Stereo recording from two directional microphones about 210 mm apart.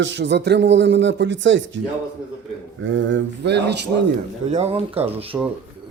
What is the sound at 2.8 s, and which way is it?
Speech, 60° right (ahead or behind).